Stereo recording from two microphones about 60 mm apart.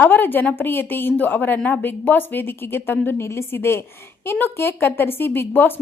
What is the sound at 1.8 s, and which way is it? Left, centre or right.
Speech, left.